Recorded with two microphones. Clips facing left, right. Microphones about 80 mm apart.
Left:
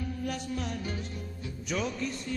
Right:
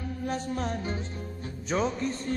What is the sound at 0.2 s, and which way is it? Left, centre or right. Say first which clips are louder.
Music: right 6 dB; right.